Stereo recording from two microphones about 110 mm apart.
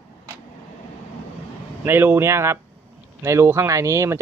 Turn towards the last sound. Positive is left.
turn(degrees=-25)  # may be behind; listen again after turning